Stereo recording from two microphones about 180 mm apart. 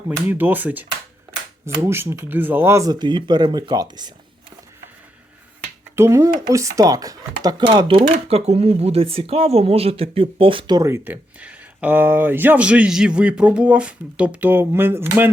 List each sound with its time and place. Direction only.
0.3 s speech: 10° right (ahead or behind)
6.0 s speech: 15° right (ahead or behind)